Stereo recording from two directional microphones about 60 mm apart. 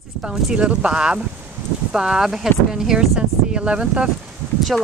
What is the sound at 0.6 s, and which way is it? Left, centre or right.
Speech, centre.